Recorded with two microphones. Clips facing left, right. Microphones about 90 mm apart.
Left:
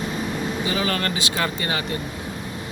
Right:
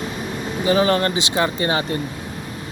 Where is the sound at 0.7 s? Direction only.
30° right (ahead or behind).